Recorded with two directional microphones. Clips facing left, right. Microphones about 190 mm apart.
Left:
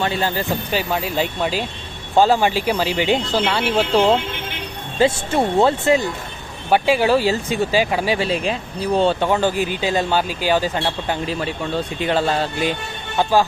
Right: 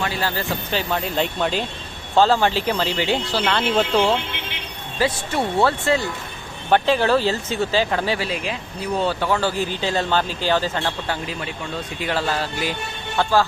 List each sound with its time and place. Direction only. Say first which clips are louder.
0.0 s speech: left 3 dB; 20° left (ahead or behind); by 4.0 s 5° left (ahead or behind)
4.9 s speech: left 5 dB; 25° left (ahead or behind)
8.2 s speech: left 5 dB; 30° left (ahead or behind); by 11.2 s 15° left (ahead or behind)
11.9 s speech: left 3 dB; 25° left (ahead or behind)